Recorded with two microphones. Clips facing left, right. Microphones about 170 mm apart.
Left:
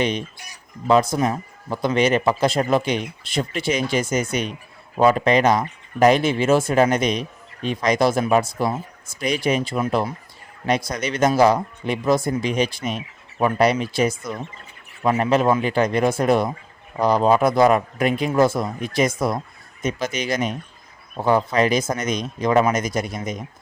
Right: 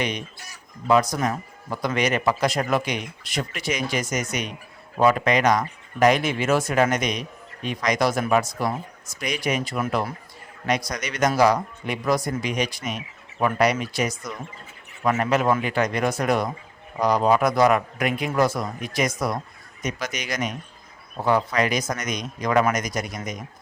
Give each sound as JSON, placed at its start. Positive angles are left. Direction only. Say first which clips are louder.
{"t": 0.0, "sound": "speech", "louder": "left 5 dB", "side_deg": 30}